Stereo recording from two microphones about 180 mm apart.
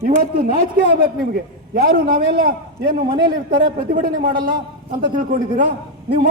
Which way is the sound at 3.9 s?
50° right (ahead or behind).